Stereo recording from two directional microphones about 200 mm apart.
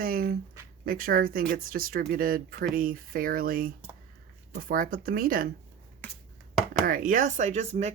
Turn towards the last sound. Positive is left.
turn(degrees=-30)  # may be behind; listen again after turning